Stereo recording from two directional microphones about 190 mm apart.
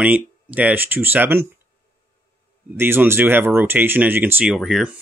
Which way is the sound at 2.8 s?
10° right (ahead or behind).